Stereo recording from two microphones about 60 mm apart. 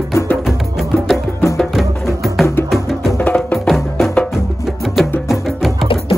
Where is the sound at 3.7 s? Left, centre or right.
Centre.